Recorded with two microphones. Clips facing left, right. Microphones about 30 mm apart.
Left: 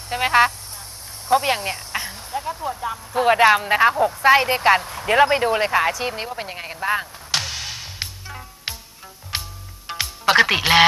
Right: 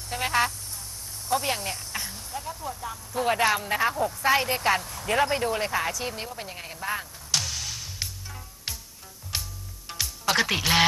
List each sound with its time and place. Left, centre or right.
0.1 s speech: left
9.3 s music: left